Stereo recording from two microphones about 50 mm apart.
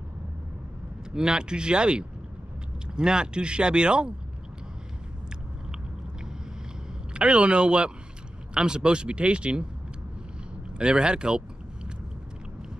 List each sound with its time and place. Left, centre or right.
1.1 s speech: centre
7.2 s speech: right
10.8 s speech: centre